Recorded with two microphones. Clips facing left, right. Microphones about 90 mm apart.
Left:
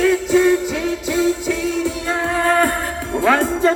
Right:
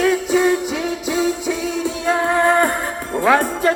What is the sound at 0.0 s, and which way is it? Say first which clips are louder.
Music: left 1 dB; 15° right (ahead or behind).